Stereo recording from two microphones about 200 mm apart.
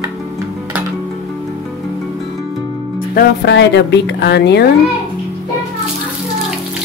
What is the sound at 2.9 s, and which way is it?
Speech, 55° left (ahead or behind).